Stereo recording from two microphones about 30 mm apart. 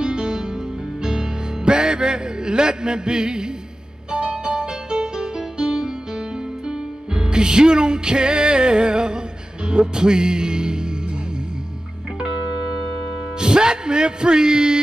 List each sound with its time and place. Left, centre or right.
0.0 s music: right
13.4 s music: right